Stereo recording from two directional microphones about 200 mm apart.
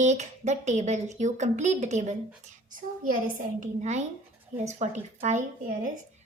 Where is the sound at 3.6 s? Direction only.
35° right (ahead or behind).